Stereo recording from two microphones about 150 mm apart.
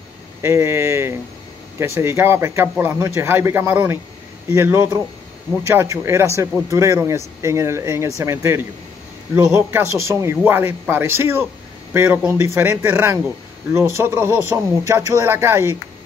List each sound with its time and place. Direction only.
0.4 s speech: 20° right (ahead or behind)